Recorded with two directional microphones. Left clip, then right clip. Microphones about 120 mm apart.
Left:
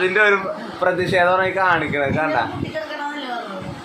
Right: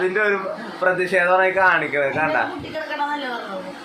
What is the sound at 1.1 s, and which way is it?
Speech, 35° left (ahead or behind).